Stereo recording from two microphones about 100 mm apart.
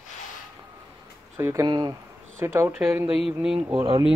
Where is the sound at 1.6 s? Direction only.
45° right (ahead or behind).